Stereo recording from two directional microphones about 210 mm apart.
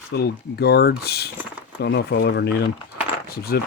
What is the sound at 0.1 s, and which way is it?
Speech, 50° left (ahead or behind).